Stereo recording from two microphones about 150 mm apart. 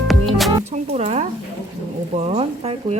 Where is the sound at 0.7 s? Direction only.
45° right (ahead or behind).